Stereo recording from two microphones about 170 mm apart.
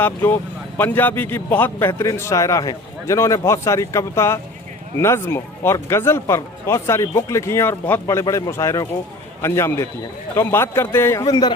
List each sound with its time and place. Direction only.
0.0 s speech: 10° left (ahead or behind)